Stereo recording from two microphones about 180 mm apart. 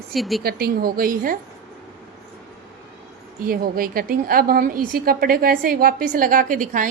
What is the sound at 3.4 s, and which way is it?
A woman's voice, 55° right (ahead or behind).